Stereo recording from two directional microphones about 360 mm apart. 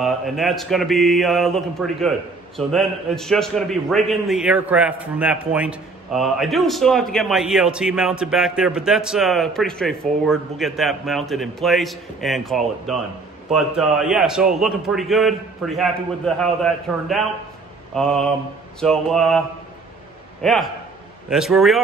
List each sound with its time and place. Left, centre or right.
0.0 s speech: centre
20.4 s speech: centre